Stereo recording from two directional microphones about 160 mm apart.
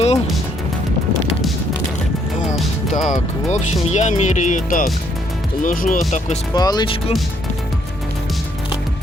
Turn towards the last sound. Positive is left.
turn(degrees=30)  # may be behind; listen again after turning